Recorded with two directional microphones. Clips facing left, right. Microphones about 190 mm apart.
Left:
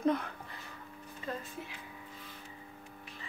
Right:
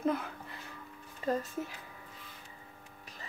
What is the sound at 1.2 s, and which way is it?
Music, 40° right (ahead or behind).